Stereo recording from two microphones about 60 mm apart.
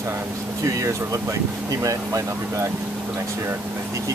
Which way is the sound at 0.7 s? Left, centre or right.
Right.